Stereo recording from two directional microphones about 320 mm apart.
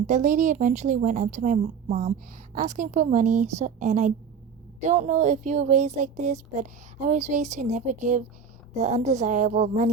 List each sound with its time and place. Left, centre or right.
0.1 s speech: right